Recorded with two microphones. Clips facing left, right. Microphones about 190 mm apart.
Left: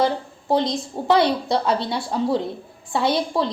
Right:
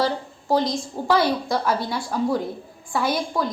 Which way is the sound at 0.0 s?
25° left (ahead or behind).